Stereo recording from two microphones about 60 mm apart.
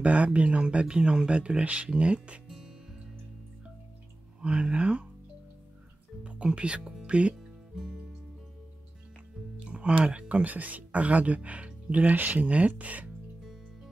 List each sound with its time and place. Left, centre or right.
0.0 s speech: right
2.4 s music: centre
4.4 s speech: centre
6.2 s speech: centre
7.3 s music: centre
9.7 s speech: centre